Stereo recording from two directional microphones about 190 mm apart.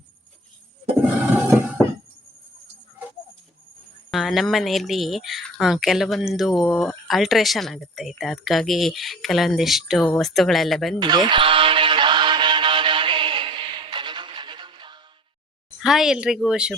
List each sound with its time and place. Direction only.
4.1 s speech: centre (ahead or behind)
11.0 s music: 25° right (ahead or behind)
15.8 s speech: centre (ahead or behind)